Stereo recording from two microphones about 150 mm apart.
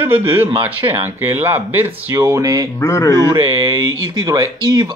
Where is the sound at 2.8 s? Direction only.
20° left (ahead or behind).